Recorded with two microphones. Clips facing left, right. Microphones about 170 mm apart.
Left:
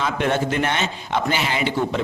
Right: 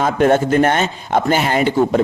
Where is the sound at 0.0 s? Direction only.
50° right (ahead or behind).